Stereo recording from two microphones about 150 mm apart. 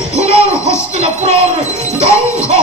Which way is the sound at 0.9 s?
45° right (ahead or behind).